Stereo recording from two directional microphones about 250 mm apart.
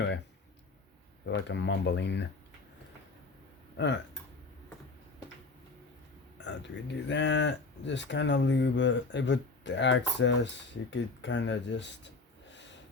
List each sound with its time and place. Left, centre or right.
1.2 s cattle: left
3.8 s cattle: left
6.4 s cattle: left